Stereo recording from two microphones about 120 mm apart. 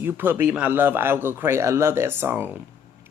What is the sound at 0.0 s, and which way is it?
Speech, 15° right (ahead or behind).